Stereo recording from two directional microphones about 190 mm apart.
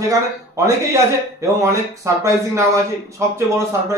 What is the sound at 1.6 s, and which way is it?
A man's voice, 15° right (ahead or behind).